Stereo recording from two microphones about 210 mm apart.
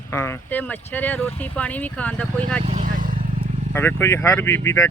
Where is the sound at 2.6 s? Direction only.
35° right (ahead or behind).